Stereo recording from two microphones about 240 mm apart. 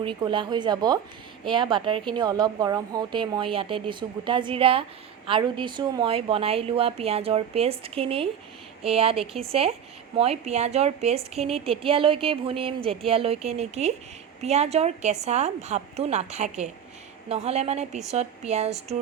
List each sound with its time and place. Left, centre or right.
0.0 s speech: right